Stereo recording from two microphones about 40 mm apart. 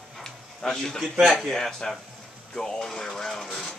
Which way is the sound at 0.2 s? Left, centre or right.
Centre.